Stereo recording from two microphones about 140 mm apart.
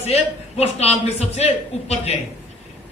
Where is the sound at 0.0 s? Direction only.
50° left (ahead or behind).